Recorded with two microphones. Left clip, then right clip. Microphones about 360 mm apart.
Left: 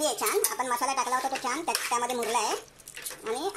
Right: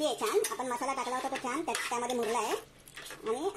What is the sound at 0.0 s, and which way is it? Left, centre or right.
Dishes, left.